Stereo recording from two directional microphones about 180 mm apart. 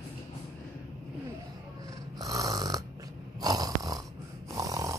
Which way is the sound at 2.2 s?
20° right (ahead or behind).